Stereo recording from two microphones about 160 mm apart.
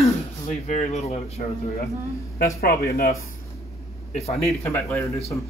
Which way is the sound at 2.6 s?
70° left (ahead or behind).